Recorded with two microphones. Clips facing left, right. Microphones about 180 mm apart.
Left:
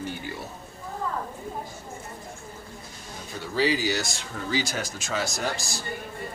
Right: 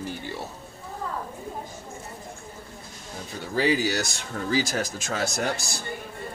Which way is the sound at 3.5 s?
55° right (ahead or behind).